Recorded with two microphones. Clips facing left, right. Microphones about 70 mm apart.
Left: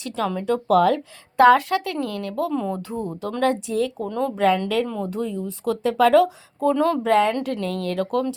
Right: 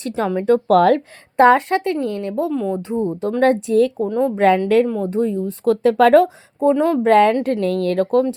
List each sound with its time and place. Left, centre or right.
0.1 s a woman's voice: right
0.3 s speech: right
1.4 s a woman's voice: right
2.5 s speech: centre
2.7 s a woman's voice: right
3.4 s speech: right
4.0 s a woman's voice: right
4.4 s speech: right
4.9 s speech: right
6.6 s a woman's voice: right
7.0 s speech: right